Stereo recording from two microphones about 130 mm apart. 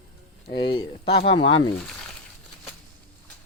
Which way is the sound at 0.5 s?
40° left (ahead or behind).